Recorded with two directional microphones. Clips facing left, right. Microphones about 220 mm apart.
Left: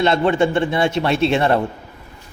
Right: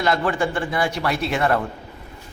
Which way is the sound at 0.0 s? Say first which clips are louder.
Left 5 dB; 25° left (ahead or behind).